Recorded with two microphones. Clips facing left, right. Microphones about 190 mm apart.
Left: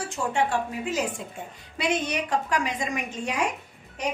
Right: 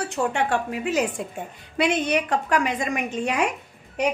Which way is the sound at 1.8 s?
60° right (ahead or behind).